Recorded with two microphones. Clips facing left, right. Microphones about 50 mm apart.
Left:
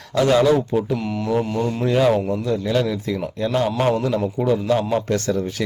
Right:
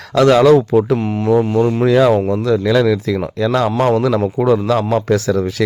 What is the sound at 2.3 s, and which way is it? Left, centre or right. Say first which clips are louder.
Speech: right 7 dB; right.